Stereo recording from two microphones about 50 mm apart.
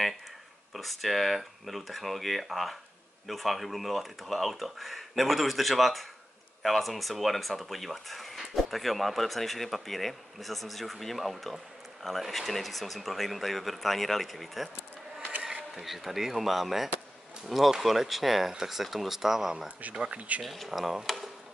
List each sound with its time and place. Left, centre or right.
0.7 s speech: centre
15.7 s speech: centre
20.0 s speech: right
20.4 s speech: centre